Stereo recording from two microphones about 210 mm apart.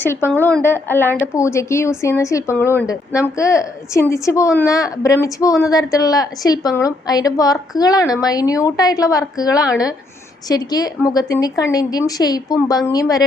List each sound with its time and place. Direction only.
0.0 s speech: 10° left (ahead or behind)